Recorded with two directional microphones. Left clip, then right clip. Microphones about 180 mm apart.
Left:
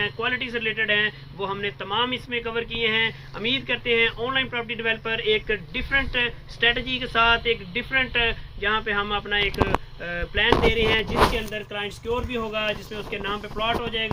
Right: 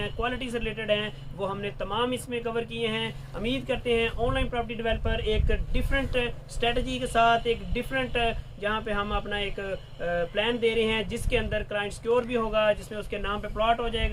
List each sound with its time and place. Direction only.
0.0 s speech: 10° right (ahead or behind)